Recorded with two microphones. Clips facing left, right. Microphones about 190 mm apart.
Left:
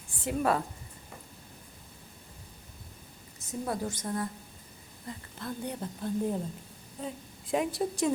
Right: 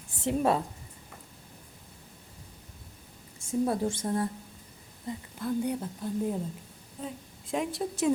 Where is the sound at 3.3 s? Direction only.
25° right (ahead or behind).